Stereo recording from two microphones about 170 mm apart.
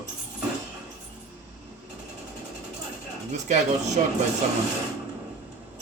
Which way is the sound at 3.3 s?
45° right (ahead or behind).